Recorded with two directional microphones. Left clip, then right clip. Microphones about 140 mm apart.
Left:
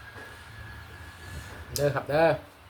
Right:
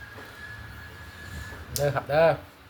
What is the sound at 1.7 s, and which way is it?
Speech, 15° left (ahead or behind).